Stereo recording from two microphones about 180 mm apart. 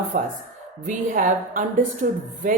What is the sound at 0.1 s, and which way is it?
A woman's voice, 45° right (ahead or behind).